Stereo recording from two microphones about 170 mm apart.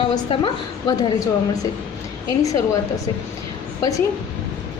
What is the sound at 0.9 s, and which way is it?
Speech, 25° left (ahead or behind).